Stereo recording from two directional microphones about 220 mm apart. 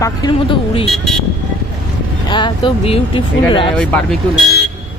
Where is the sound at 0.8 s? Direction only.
Centre (ahead or behind).